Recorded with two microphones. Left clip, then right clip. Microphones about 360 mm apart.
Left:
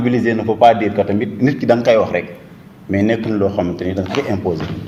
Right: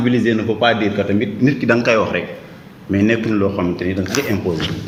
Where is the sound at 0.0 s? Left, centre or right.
Centre.